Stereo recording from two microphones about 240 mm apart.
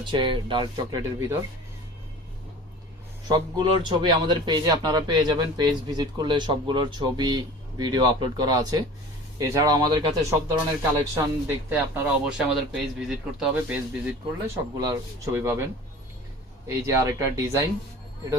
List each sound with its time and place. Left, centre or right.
0.0 s speech: centre
3.2 s a man's voice: centre
11.7 s a man's voice: centre
16.6 s a man's voice: centre